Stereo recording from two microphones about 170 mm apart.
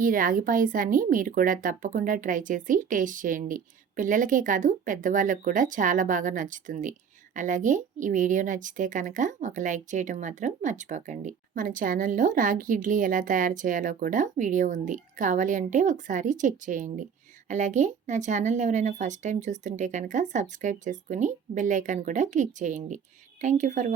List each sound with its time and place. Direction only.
0.0 s a woman's voice: 55° right (ahead or behind)